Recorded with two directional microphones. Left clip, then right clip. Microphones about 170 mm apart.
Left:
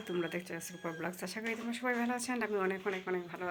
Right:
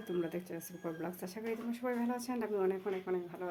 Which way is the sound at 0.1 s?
Centre (ahead or behind).